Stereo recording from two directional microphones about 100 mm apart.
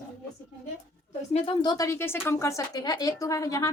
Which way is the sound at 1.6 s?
35° left (ahead or behind).